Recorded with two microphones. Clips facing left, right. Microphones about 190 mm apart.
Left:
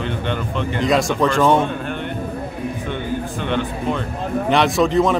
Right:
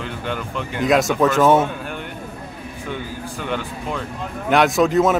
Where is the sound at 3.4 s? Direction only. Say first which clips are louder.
Left 4 dB; 5° right (ahead or behind).